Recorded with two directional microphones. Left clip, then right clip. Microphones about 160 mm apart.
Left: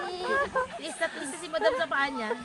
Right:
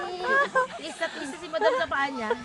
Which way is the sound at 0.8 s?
5° right (ahead or behind).